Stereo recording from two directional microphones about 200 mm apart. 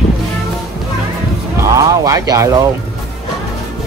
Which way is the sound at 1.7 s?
15° right (ahead or behind).